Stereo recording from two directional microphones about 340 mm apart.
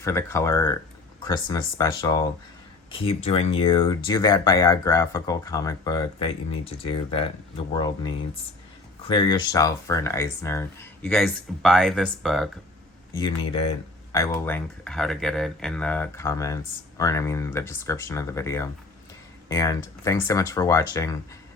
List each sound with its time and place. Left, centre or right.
0.0 s speech: centre
9.0 s speech: centre
13.1 s speech: centre